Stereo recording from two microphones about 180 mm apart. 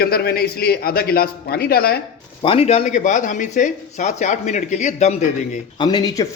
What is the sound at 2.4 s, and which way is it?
Speech, 35° left (ahead or behind).